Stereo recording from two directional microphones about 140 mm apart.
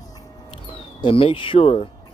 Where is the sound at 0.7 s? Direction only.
40° left (ahead or behind).